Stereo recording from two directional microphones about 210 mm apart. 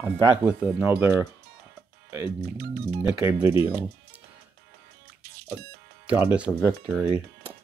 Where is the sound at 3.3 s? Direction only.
10° right (ahead or behind).